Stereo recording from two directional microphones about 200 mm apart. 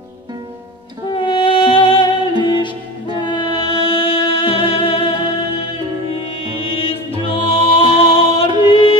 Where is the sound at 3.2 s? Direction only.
25° left (ahead or behind).